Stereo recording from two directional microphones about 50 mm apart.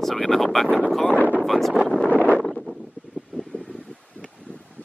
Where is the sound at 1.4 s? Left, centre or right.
Centre.